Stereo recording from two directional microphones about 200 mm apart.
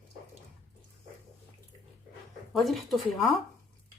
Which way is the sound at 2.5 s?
Centre (ahead or behind).